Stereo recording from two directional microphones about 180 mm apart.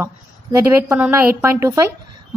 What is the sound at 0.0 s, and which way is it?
A woman's voice, 15° right (ahead or behind).